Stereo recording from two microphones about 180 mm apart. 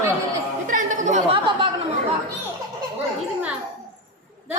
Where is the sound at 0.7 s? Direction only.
45° right (ahead or behind).